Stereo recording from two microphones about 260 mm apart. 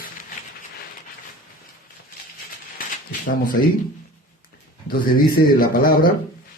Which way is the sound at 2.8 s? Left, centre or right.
Left.